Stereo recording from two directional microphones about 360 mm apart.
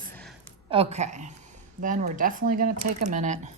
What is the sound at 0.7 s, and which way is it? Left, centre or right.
Speech, centre.